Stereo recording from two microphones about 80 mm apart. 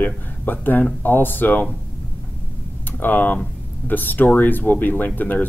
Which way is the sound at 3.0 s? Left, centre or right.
Left.